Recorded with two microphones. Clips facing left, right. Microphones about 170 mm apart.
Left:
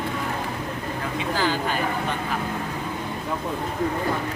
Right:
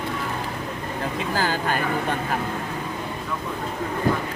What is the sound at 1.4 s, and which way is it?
Speech, 45° right (ahead or behind).